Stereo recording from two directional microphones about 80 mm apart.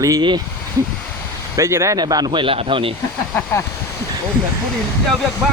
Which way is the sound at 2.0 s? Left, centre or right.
Right.